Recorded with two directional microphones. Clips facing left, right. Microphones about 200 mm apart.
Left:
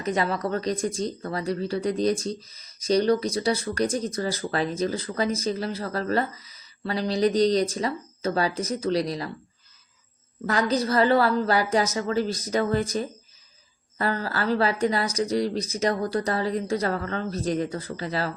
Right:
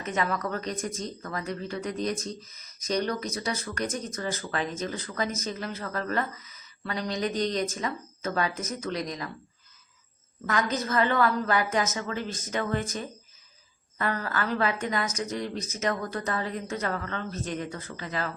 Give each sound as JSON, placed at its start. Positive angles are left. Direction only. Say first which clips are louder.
{"t": 0.0, "sound": "speech", "louder": "left 4 dB", "side_deg": 35}
{"t": 10.4, "sound": "speech", "louder": "left 5 dB", "side_deg": 35}